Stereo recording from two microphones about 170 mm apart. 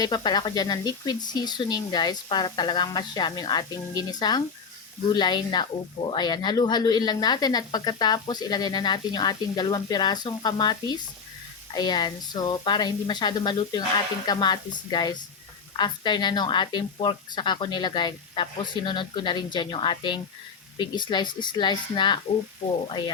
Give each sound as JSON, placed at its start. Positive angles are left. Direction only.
{"t": 0.0, "sound": "speech", "side_deg": 25}